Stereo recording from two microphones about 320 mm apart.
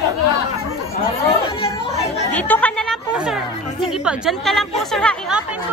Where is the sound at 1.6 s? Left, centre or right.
Centre.